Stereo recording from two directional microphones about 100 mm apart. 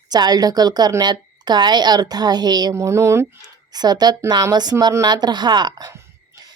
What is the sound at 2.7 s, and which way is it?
Speech, 30° right (ahead or behind).